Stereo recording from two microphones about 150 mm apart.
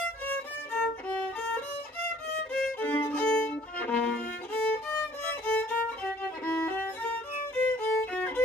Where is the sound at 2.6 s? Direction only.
10° left (ahead or behind).